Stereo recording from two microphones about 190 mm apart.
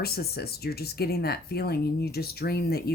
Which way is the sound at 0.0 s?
55° left (ahead or behind).